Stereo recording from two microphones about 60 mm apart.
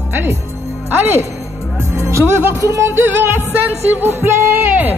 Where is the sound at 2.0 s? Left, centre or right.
Right.